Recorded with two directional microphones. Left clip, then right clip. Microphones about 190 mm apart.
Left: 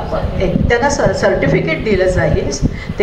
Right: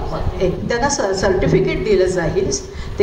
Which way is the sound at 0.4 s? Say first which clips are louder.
Left 4 dB; 35° right (ahead or behind).